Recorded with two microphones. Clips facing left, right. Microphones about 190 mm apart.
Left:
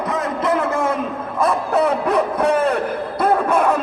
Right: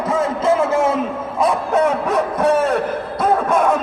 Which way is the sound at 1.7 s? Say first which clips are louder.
Even; 10° left (ahead or behind).